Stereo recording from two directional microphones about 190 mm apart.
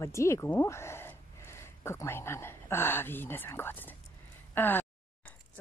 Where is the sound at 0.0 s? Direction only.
15° left (ahead or behind).